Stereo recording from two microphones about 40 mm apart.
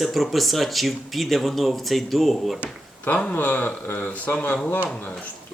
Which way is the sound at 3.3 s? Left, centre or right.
Left.